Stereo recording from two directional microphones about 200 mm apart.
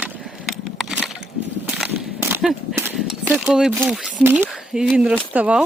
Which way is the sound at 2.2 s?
5° right (ahead or behind).